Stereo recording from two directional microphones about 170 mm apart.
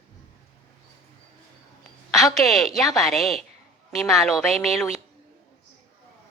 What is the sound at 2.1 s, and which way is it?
A woman's voice, centre (ahead or behind).